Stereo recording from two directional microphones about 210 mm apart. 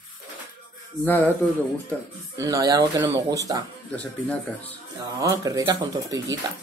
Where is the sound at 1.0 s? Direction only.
10° left (ahead or behind).